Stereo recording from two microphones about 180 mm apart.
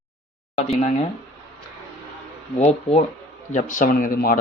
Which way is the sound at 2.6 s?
35° left (ahead or behind).